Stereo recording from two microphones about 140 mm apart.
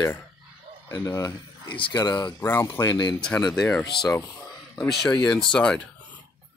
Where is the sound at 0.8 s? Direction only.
20° left (ahead or behind).